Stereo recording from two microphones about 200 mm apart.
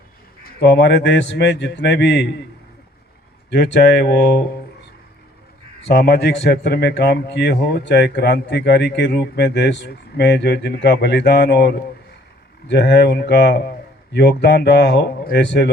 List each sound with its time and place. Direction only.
0.4 s a man's voice: 55° left (ahead or behind)
3.5 s a man's voice: 55° left (ahead or behind)
5.9 s a man's voice: 50° left (ahead or behind)